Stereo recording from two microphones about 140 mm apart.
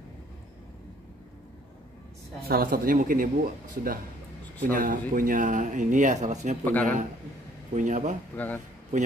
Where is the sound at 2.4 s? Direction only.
90° right.